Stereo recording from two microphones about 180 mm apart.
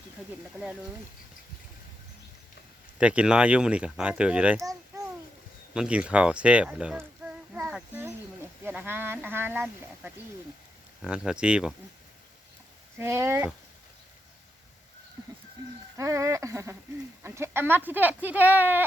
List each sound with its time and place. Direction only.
3.0 s speech: 5° right (ahead or behind)
4.6 s babbling: 20° right (ahead or behind)
5.7 s speech: 5° right (ahead or behind)
7.5 s a sound: 5° right (ahead or behind)
8.6 s speech: 10° right (ahead or behind)
13.0 s speech: 15° right (ahead or behind)
16.0 s speech: 15° right (ahead or behind)